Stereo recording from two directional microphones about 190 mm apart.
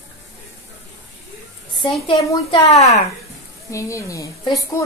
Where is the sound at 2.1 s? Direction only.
30° left (ahead or behind).